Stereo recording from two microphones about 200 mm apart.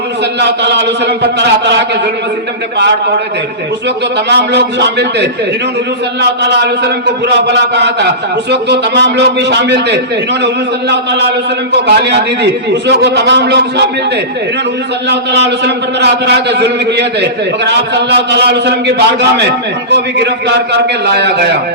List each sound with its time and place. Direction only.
0.3 s a man's voice: 60° right (ahead or behind)
4.3 s a man's voice: 55° right (ahead or behind)
15.1 s a man's voice: 60° right (ahead or behind)